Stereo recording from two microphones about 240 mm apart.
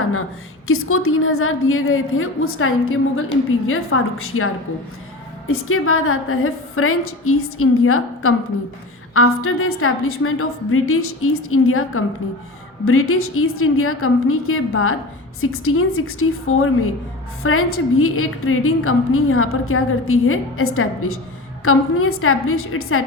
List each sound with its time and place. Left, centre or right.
0.0 s a sound: left
0.7 s a woman's voice: left
5.5 s a woman's voice: left